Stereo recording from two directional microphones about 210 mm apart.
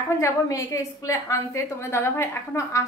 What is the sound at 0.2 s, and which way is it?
A woman's voice, 15° left (ahead or behind).